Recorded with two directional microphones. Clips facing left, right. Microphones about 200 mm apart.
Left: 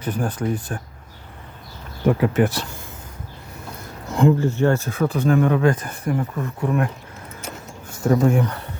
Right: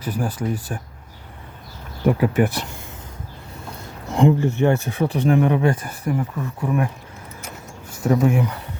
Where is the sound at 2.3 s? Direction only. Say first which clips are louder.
Even; 15° right (ahead or behind).